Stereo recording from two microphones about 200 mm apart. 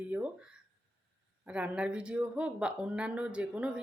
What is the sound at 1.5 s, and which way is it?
Speech, 5° right (ahead or behind).